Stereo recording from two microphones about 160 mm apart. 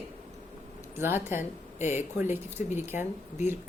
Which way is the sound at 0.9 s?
15° right (ahead or behind).